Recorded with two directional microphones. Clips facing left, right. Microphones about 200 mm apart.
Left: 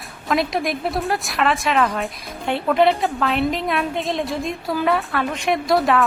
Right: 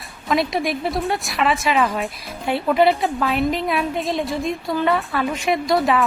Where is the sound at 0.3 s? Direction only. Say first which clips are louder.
Right 1 dB; centre (ahead or behind).